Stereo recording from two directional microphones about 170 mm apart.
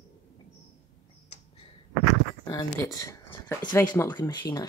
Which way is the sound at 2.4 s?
20° left (ahead or behind).